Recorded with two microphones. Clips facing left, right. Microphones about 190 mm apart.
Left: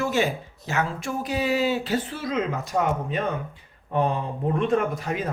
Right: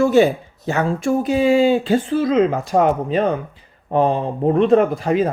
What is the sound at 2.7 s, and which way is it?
Speech, 90° right.